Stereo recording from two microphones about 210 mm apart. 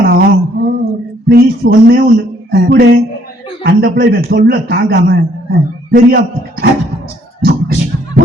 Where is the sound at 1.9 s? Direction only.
45° right (ahead or behind).